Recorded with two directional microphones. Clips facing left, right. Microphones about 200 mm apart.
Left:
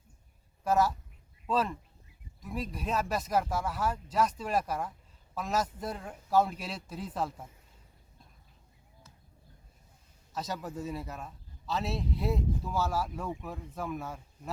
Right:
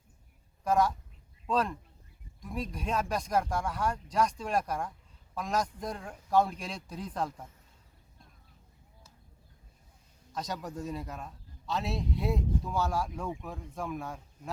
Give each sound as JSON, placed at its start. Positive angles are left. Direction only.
{"t": 0.6, "sound": "speech", "side_deg": 5}
{"t": 10.3, "sound": "speech", "side_deg": 5}